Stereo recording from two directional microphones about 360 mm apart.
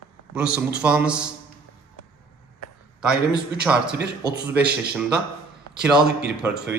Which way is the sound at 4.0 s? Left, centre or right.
Right.